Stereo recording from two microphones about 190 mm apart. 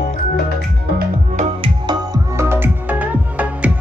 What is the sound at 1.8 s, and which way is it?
Music, 15° right (ahead or behind).